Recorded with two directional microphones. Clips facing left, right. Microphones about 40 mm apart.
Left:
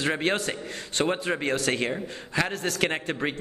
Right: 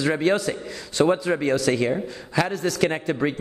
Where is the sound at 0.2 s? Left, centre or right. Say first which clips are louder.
Right 5 dB; left.